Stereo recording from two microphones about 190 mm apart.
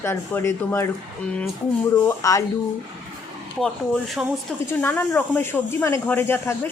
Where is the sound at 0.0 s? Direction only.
15° left (ahead or behind).